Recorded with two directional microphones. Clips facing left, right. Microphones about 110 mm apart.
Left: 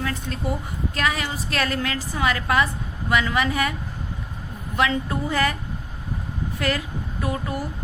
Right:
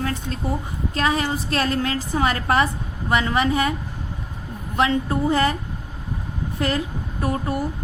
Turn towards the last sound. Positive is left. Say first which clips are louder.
# right 3 dB
turn(degrees=-40)  # may be behind; listen again after turning